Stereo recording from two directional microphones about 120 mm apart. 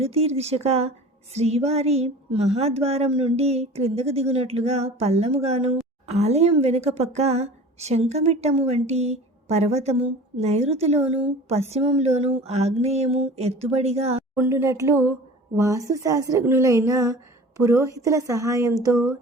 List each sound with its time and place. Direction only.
0.0 s a woman's voice: 60° right (ahead or behind)
14.3 s a woman's voice: 20° right (ahead or behind)